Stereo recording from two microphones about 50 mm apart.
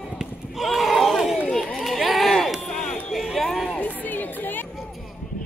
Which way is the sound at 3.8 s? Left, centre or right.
Left.